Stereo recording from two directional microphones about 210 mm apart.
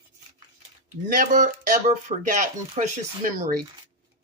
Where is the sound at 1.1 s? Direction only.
40° right (ahead or behind).